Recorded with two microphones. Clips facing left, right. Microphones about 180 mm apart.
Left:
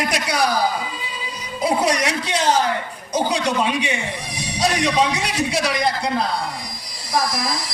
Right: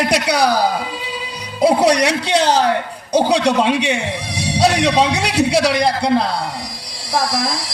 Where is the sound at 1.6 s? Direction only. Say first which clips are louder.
Right 6 dB; 70° right (ahead or behind).